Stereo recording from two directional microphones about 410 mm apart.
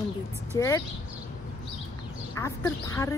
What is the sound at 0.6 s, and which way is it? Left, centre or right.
Speech, centre.